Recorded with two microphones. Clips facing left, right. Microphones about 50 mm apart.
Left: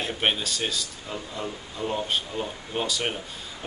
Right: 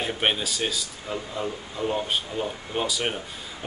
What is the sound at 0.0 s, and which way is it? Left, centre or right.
A man's voice, centre.